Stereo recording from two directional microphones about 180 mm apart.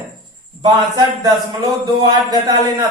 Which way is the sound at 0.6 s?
20° right (ahead or behind).